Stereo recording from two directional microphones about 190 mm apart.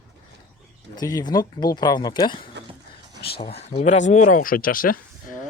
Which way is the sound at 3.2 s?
55° left (ahead or behind).